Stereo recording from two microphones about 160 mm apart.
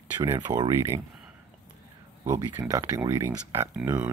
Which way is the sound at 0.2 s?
20° right (ahead or behind).